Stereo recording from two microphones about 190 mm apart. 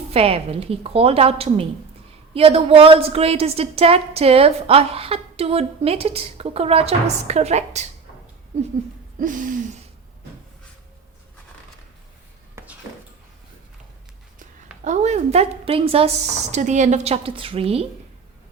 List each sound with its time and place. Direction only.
0.1 s a woman's voice: 30° right (ahead or behind)
9.1 s a sound: 45° right (ahead or behind)
14.8 s a woman's voice: 40° right (ahead or behind)